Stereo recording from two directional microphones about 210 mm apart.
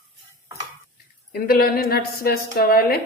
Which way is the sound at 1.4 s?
45° left (ahead or behind).